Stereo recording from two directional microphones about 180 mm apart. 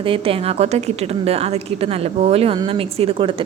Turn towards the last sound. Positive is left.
turn(degrees=-30)  # may be behind; listen again after turning